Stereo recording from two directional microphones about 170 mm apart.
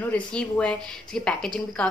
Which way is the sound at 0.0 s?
5° left (ahead or behind).